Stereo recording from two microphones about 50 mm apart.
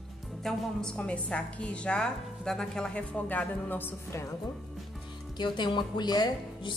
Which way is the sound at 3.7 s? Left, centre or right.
Left.